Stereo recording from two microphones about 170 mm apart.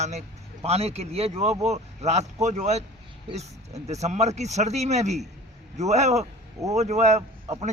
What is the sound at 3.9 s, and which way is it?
Speech, 40° right (ahead or behind).